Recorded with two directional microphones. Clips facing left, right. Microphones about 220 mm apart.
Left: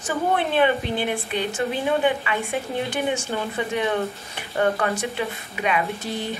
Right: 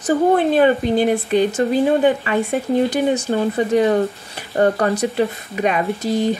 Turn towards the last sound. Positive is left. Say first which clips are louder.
# right 10 dB
turn(degrees=-40)  # may be behind; listen again after turning